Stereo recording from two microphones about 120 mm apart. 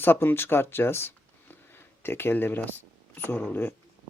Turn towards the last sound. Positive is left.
turn(degrees=15)  # may be behind; listen again after turning